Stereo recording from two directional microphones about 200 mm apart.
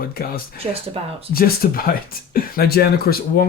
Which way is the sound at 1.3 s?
45° left (ahead or behind).